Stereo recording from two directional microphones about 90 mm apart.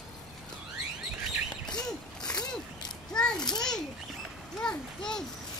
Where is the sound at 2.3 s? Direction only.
50° left (ahead or behind).